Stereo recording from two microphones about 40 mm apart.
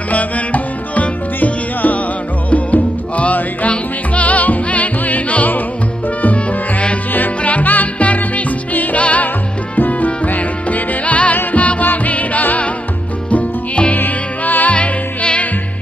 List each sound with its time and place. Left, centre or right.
0.1 s music: left
13.9 s music: left
14.8 s music: left